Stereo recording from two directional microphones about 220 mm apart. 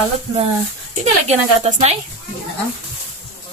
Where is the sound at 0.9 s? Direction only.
30° right (ahead or behind).